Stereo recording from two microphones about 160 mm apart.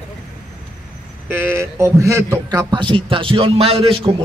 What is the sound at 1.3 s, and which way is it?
A man's voice, 15° right (ahead or behind).